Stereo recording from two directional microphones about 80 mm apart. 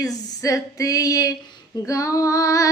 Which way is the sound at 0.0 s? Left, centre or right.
Left.